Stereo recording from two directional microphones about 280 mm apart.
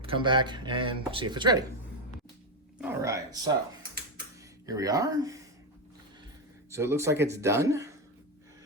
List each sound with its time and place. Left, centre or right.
0.0 s speech: centre
2.8 s a sound: centre
4.6 s speech: centre
6.7 s speech: centre